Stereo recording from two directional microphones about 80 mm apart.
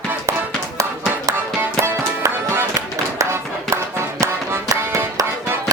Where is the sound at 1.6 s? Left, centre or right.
Right.